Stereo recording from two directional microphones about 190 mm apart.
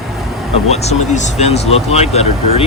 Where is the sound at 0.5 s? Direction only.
35° left (ahead or behind).